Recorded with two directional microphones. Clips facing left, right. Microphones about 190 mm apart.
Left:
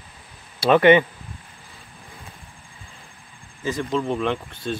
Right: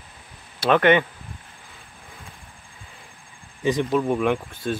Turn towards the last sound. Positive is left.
turn(degrees=-10)  # may be behind; listen again after turning